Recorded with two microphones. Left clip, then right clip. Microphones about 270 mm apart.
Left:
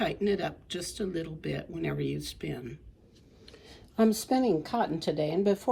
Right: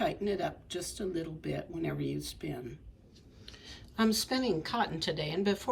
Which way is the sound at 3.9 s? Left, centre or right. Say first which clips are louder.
Left 4 dB; left.